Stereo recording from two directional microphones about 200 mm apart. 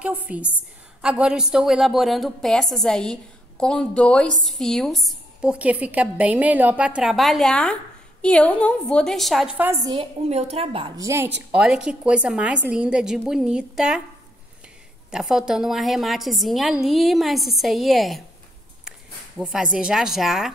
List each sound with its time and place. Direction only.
0.0 s a woman's voice: 5° right (ahead or behind)
9.8 s a woman's voice: 30° right (ahead or behind)
11.0 s a woman's voice: 15° right (ahead or behind)
15.0 s a woman's voice: centre (ahead or behind)